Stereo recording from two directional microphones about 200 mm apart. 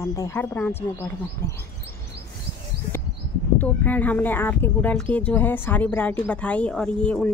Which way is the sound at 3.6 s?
10° left (ahead or behind).